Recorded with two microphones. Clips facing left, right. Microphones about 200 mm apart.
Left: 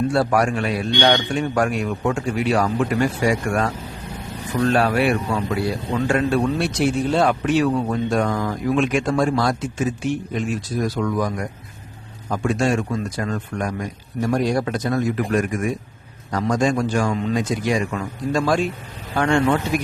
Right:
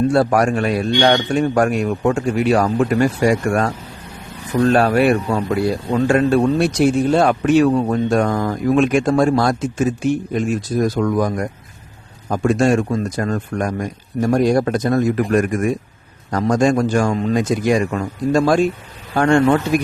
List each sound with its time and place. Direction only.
0.1 s a man's voice: 45° right (ahead or behind)
4.7 s a man's voice: 45° right (ahead or behind)